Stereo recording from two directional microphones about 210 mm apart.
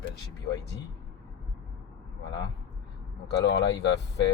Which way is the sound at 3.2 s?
55° left (ahead or behind).